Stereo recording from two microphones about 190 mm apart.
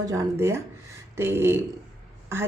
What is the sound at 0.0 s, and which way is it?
Speech, 20° right (ahead or behind).